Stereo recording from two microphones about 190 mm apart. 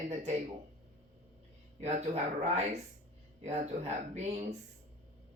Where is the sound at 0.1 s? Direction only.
35° right (ahead or behind).